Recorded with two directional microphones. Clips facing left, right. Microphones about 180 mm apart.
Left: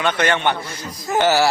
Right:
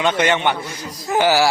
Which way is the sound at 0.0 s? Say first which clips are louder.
Right 1 dB; 15° right (ahead or behind).